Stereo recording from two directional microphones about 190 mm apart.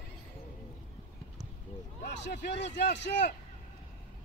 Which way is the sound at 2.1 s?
65° left (ahead or behind).